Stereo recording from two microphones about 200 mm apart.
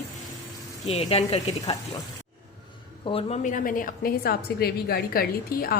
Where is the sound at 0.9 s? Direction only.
30° left (ahead or behind).